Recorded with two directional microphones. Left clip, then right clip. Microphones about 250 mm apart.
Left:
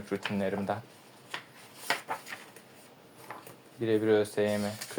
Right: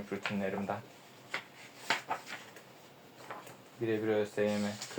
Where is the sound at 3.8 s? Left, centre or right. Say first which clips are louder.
Left 6 dB; left.